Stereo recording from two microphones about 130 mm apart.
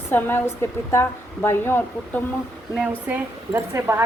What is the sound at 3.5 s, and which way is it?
Speech, 20° right (ahead or behind).